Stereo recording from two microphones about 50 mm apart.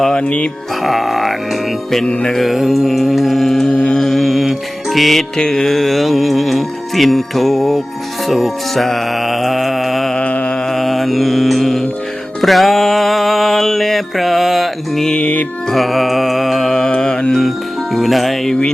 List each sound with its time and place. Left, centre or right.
0.2 s speech: left
0.8 s speech: centre
2.4 s speech: centre
3.7 s speech: centre
4.0 s music: centre
5.4 s speech: centre
8.3 s music: centre
10.2 s music: left
10.7 s mantra: centre
12.4 s music: centre
15.2 s music: left
15.7 s music: centre
17.9 s speech: centre